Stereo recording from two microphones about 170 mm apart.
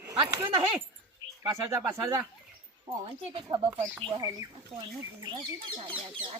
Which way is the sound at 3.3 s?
25° right (ahead or behind).